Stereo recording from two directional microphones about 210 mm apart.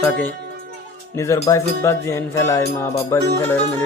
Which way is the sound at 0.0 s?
10° left (ahead or behind).